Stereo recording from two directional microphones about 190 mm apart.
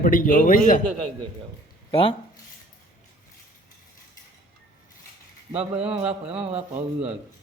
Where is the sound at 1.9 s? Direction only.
30° left (ahead or behind).